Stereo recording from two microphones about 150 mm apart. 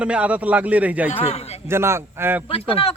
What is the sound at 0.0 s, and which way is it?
Speech, 10° right (ahead or behind).